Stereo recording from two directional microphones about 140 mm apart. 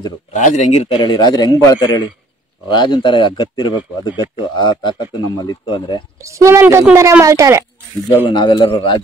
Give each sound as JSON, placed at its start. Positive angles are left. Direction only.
{"t": 0.3, "sound": "speech", "side_deg": 60}
{"t": 0.9, "sound": "a man's voice", "side_deg": 30}
{"t": 6.1, "sound": "speech", "side_deg": -20}
{"t": 8.3, "sound": "speech", "side_deg": 30}